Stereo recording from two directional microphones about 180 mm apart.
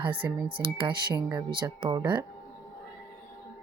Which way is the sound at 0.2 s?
10° right (ahead or behind).